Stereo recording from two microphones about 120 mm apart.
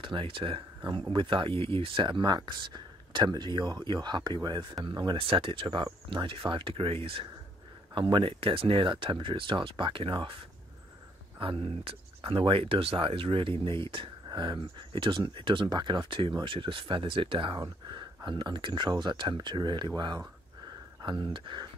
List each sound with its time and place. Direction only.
0.0 s speech: 45° right (ahead or behind)
11.3 s speech: 50° right (ahead or behind)